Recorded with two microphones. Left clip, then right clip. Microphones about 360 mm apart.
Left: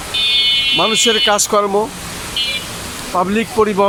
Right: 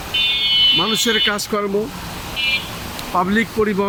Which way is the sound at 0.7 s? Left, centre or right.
Centre.